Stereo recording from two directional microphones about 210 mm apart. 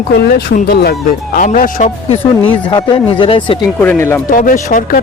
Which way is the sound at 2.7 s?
20° left (ahead or behind).